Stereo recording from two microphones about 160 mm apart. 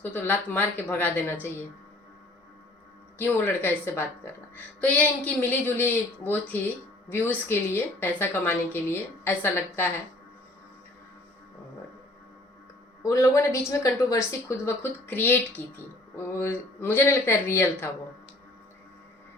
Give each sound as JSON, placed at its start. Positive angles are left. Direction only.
{"t": 0.0, "sound": "a woman's voice", "side_deg": 10}
{"t": 3.2, "sound": "a woman's voice", "side_deg": 10}
{"t": 13.0, "sound": "a woman's voice", "side_deg": 20}